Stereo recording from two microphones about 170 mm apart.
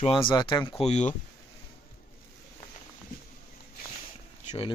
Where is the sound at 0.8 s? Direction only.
45° left (ahead or behind).